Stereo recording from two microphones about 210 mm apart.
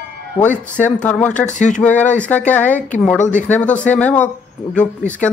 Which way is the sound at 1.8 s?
5° left (ahead or behind).